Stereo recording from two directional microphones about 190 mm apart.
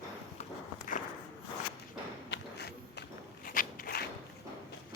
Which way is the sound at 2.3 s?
60° left (ahead or behind).